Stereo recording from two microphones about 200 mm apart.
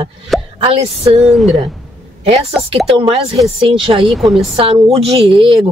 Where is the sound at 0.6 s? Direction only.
30° right (ahead or behind).